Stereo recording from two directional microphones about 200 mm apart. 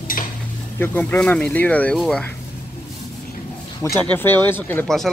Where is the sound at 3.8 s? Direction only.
10° left (ahead or behind).